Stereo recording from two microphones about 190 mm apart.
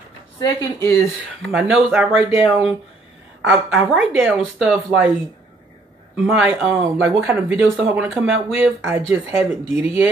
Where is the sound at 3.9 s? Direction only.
Centre (ahead or behind).